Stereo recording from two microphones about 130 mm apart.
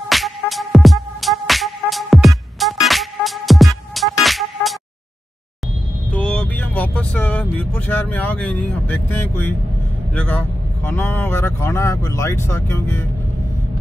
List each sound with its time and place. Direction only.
0.1 s music: centre (ahead or behind)
6.1 s vehicle: 10° left (ahead or behind)
10.1 s speech: 10° left (ahead or behind)